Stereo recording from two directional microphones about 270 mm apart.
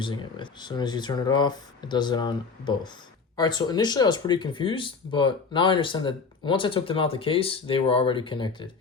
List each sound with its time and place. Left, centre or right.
0.0 s speech: centre